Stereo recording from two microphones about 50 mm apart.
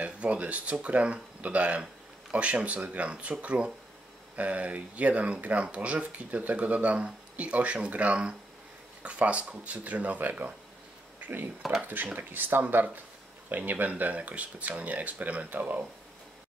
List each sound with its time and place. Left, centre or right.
0.0 s speech: right
11.6 s speech: centre
12.1 s speech: right
12.6 s speech: right